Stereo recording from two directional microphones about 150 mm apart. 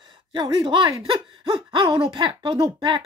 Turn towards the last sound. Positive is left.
turn(degrees=-30)  # may be behind; listen again after turning